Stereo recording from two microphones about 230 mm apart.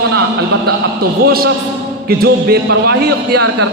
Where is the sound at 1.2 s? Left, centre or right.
Right.